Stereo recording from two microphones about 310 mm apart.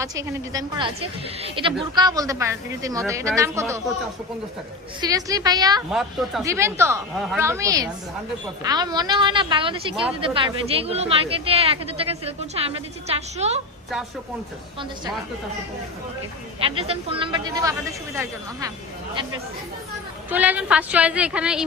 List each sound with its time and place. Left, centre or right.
0.0 s speech: centre
4.9 s speech: centre
5.9 s speech: centre
9.9 s a woman's voice: centre
10.2 s a woman's voice: centre
16.6 s speech: centre
20.3 s a woman's voice: centre